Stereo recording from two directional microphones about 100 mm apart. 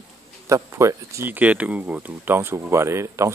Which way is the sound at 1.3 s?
15° right (ahead or behind).